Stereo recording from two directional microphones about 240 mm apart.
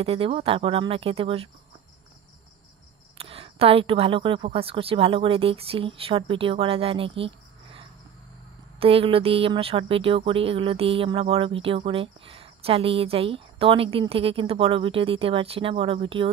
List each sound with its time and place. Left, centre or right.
0.0 s speech: right
3.2 s speech: right